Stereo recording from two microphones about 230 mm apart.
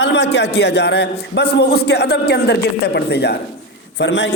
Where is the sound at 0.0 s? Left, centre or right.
Left.